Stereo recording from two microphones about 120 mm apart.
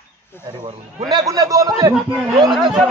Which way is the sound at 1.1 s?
30° right (ahead or behind).